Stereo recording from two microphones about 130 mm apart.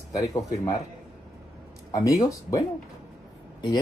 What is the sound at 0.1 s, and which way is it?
Speech, 25° left (ahead or behind).